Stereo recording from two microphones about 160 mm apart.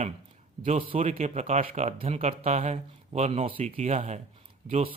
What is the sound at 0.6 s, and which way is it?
A man's voice, 35° right (ahead or behind).